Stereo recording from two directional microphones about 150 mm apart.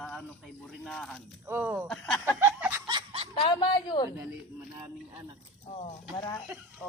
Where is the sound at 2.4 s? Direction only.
15° right (ahead or behind).